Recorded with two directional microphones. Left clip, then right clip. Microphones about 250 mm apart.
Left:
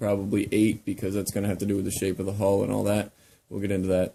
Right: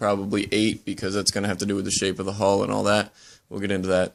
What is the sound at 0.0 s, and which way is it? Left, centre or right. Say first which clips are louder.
Speech: right 3 dB; centre.